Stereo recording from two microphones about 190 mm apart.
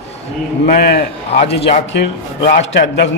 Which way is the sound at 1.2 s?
35° left (ahead or behind).